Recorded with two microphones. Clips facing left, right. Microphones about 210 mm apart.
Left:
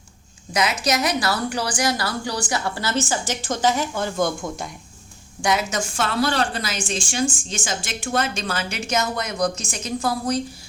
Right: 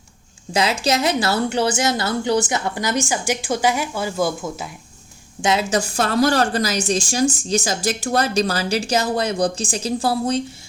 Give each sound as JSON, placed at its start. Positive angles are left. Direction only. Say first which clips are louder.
{"t": 0.5, "sound": "a woman's voice", "louder": "right 3 dB", "side_deg": -30}
{"t": 5.4, "sound": "a woman's voice", "louder": "right 3 dB", "side_deg": -25}
{"t": 6.0, "sound": "speech", "louder": "right 4 dB", "side_deg": -40}